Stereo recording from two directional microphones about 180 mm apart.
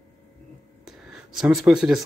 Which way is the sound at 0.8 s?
Centre (ahead or behind).